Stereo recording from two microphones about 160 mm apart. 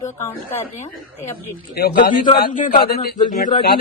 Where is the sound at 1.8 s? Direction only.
70° left (ahead or behind).